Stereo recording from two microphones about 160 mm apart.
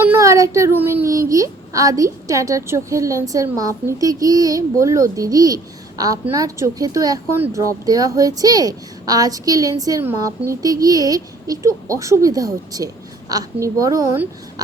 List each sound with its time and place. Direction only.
0.0 s speech: 15° right (ahead or behind)